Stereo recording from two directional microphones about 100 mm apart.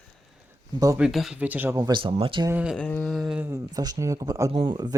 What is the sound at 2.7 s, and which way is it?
Speech, 10° left (ahead or behind).